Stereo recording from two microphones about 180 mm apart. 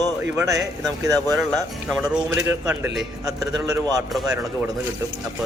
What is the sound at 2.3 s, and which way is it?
Speech, 10° right (ahead or behind).